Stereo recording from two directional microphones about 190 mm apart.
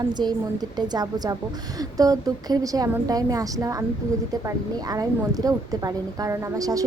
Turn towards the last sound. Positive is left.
turn(degrees=-20)  # may be behind; listen again after turning